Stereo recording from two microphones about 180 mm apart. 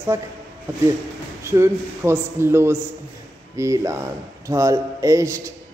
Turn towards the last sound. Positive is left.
turn(degrees=-15)  # may be behind; listen again after turning